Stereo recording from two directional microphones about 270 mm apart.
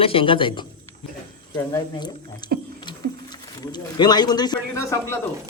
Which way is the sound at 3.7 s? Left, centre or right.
Centre.